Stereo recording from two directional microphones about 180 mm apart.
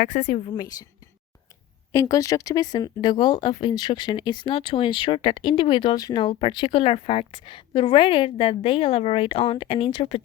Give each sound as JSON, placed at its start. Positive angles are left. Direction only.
{"t": 0.0, "sound": "a woman's voice", "side_deg": 45}
{"t": 0.5, "sound": "speech", "side_deg": 20}
{"t": 1.9, "sound": "speech", "side_deg": 20}